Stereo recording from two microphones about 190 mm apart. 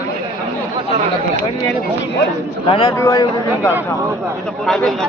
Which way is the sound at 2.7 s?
25° left (ahead or behind).